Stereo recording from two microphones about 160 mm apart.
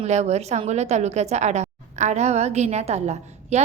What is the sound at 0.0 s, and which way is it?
A woman's voice, 45° right (ahead or behind).